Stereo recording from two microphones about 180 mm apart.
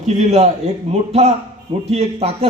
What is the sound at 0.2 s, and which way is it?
Speech, 40° right (ahead or behind).